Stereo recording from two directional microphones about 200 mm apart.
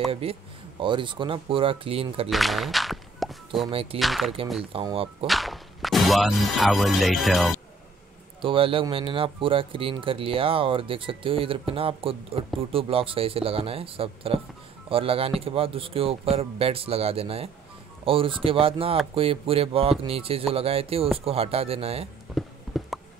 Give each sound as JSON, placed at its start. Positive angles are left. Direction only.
{"t": 0.1, "sound": "speech", "side_deg": -30}
{"t": 2.2, "sound": "speech", "side_deg": 0}
{"t": 3.6, "sound": "speech", "side_deg": -30}
{"t": 4.0, "sound": "speech", "side_deg": 0}
{"t": 4.7, "sound": "speech", "side_deg": -25}
{"t": 5.2, "sound": "speech", "side_deg": 0}
{"t": 8.4, "sound": "speech", "side_deg": -25}
{"t": 22.3, "sound": "a sound", "side_deg": 0}